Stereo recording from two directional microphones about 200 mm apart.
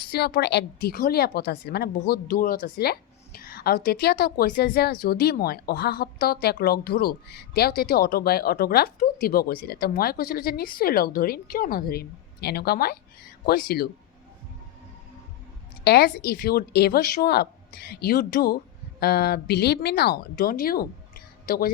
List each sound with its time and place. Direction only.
0.0 s a woman's voice: 50° left (ahead or behind)
15.8 s a woman's voice: 55° left (ahead or behind)